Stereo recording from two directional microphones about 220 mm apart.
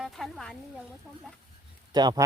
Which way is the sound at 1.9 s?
20° right (ahead or behind).